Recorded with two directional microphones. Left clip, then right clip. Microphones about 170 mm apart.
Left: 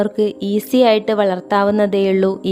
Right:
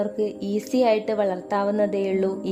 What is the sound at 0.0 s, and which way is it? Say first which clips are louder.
A woman's voice: left 8 dB; 25° left (ahead or behind).